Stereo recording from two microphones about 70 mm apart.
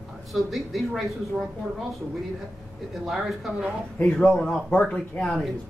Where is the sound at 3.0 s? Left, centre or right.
Centre.